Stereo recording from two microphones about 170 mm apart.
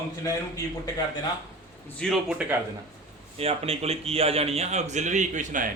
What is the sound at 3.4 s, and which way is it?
A man's voice, 35° right (ahead or behind).